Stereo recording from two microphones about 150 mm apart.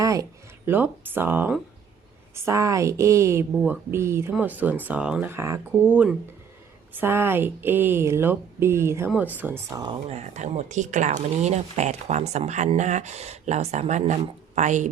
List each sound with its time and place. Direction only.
0.0 s a woman's voice: 20° right (ahead or behind)
10.1 s speech: 50° right (ahead or behind)